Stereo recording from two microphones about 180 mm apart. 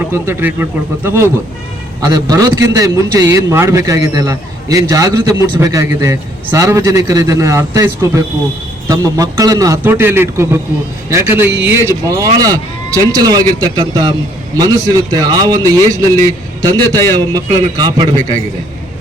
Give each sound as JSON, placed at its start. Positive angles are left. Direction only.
{"t": 0.0, "sound": "a man's voice", "side_deg": -10}
{"t": 16.9, "sound": "a man's voice", "side_deg": 15}
{"t": 17.2, "sound": "a man's voice", "side_deg": -20}